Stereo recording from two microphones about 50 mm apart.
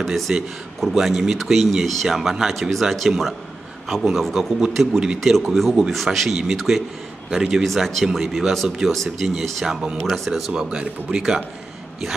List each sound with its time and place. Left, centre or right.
0.3 s speech: centre
0.8 s speech: centre
10.5 s speech: centre